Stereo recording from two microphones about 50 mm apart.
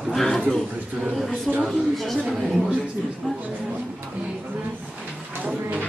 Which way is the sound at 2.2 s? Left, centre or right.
Centre.